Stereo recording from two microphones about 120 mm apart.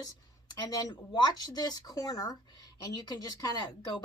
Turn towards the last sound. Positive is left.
turn(degrees=35)  # may be behind; listen again after turning